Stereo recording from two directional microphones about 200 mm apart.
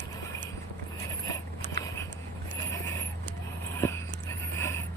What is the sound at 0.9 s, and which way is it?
Vehicle, 15° left (ahead or behind).